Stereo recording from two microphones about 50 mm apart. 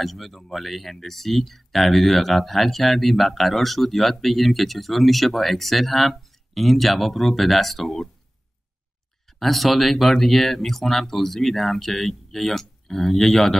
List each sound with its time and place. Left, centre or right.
0.0 s speech: centre
9.4 s speech: centre